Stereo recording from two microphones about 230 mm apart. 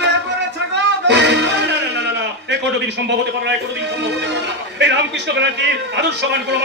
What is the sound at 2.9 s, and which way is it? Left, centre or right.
Speech, right.